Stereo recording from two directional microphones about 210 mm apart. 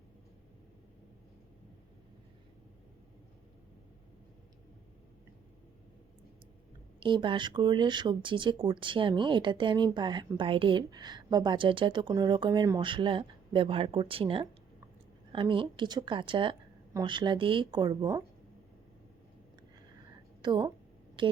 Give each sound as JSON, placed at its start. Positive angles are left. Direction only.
{"t": 7.0, "sound": "speech", "side_deg": -25}
{"t": 20.4, "sound": "a woman's voice", "side_deg": -20}